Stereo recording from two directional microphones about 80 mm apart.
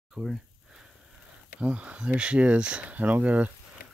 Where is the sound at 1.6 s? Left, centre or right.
Centre.